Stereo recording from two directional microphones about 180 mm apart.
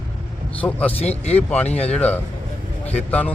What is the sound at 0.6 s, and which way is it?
Speech, 10° left (ahead or behind).